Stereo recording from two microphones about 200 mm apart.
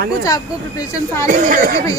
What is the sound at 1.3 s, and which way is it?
Speech, 40° right (ahead or behind).